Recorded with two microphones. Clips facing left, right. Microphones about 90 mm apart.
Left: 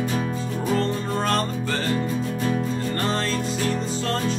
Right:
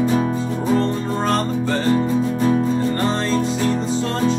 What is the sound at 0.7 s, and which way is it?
Music, 20° right (ahead or behind).